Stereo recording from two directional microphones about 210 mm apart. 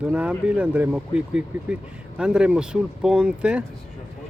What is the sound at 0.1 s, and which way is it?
Speech, 5° right (ahead or behind).